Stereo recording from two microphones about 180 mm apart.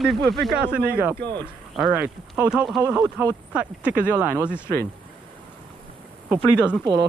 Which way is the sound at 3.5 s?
5° right (ahead or behind).